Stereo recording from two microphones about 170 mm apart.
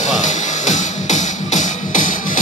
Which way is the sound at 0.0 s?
45° left (ahead or behind).